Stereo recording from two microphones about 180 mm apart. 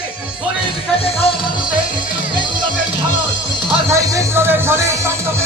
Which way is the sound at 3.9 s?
20° right (ahead or behind).